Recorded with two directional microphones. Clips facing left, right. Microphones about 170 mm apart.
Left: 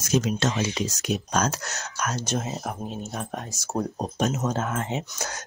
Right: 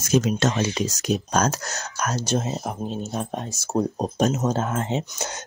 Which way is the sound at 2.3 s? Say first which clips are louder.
Right 4 dB; 25° right (ahead or behind).